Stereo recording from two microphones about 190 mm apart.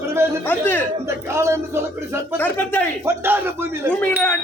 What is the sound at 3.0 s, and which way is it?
Speech, 10° right (ahead or behind).